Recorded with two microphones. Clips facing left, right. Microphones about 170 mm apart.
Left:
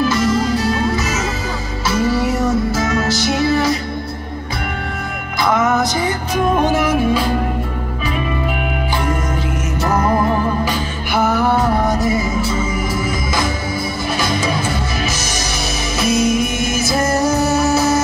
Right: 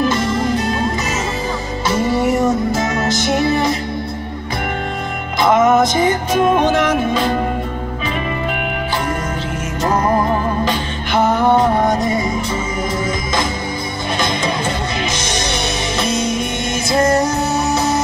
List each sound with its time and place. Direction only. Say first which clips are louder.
0.0 s music: left 1 dB; 20° right (ahead or behind)
2.0 s music: right 1 dB; 20° right (ahead or behind)
5.4 s music: right 4 dB; 20° right (ahead or behind)
6.6 s music: even; 10° left (ahead or behind)
11.4 s music: right 2 dB; 20° right (ahead or behind)
12.0 s music: even; 5° left (ahead or behind)
16.0 s music: left 5 dB; 5° left (ahead or behind)